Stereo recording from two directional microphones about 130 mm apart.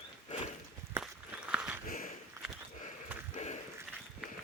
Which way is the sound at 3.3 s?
60° left (ahead or behind).